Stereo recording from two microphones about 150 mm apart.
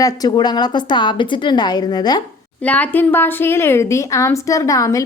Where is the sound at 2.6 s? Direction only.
10° left (ahead or behind).